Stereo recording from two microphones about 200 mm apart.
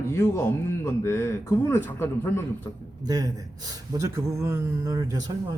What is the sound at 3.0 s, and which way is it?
Speech, 20° right (ahead or behind).